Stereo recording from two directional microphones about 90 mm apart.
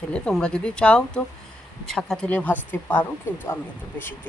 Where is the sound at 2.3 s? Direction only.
20° left (ahead or behind).